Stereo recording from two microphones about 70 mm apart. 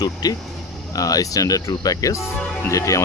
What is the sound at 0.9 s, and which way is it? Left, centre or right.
Speech, left.